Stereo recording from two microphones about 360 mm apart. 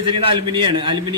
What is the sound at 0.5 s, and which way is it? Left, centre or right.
Speech, centre.